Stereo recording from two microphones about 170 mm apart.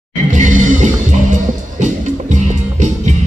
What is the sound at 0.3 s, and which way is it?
Music, 50° right (ahead or behind).